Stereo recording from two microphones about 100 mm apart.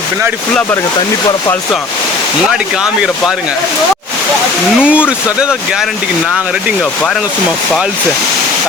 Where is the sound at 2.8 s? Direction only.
5° right (ahead or behind).